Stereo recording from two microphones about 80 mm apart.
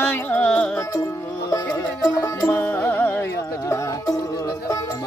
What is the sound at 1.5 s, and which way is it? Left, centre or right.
Music, left.